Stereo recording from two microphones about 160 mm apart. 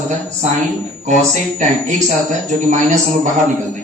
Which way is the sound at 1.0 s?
50° right (ahead or behind).